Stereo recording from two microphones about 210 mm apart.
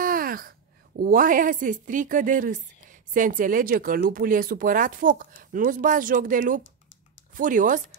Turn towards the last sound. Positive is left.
turn(degrees=-40)  # may be behind; listen again after turning